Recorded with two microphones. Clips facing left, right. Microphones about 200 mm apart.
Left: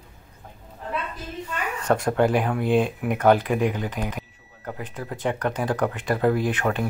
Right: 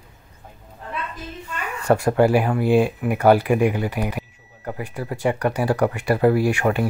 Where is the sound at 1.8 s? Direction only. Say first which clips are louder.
Right 4 dB; 5° right (ahead or behind).